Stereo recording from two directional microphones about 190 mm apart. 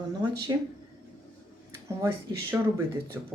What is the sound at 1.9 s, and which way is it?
Speech, 15° right (ahead or behind).